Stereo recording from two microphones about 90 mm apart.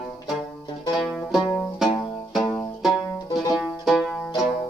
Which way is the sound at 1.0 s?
Centre (ahead or behind).